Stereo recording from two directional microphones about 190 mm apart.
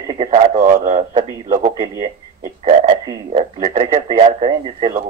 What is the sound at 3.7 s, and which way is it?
Radio, 40° right (ahead or behind).